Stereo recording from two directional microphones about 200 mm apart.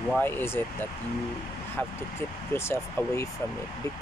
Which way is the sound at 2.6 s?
15° left (ahead or behind).